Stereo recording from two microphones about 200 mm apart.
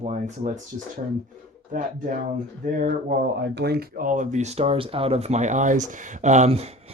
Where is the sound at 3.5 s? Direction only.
55° right (ahead or behind).